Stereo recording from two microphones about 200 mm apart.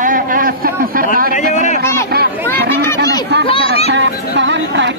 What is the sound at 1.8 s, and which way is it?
Speech, 15° left (ahead or behind).